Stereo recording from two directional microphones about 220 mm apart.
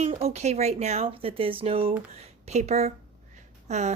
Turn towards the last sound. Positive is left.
turn(degrees=-30)  # may be behind; listen again after turning